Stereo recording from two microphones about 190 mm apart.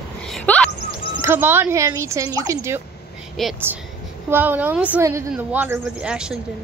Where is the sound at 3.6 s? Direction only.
10° right (ahead or behind).